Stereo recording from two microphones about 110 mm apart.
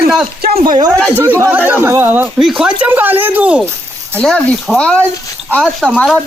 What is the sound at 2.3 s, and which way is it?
Speech, 5° right (ahead or behind).